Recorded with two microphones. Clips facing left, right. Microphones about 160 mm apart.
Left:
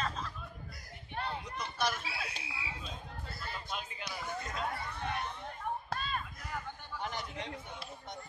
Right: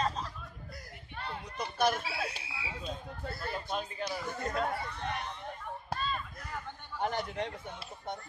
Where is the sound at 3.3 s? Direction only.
50° right (ahead or behind).